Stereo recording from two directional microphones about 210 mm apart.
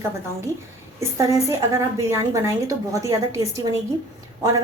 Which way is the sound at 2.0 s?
15° right (ahead or behind).